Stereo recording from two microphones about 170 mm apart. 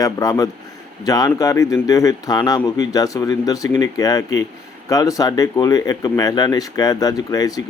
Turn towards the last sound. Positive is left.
turn(degrees=20)  # may be behind; listen again after turning